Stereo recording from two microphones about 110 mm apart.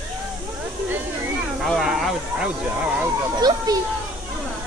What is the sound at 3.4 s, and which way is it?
Speech, 40° right (ahead or behind).